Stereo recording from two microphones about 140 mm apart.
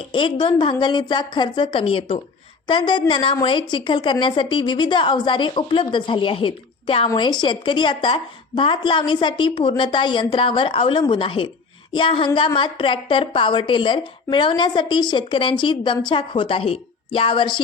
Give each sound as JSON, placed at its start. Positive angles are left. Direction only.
{"t": 0.1, "sound": "a woman's voice", "side_deg": 35}